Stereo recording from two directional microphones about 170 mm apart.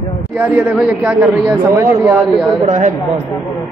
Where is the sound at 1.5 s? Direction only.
15° right (ahead or behind).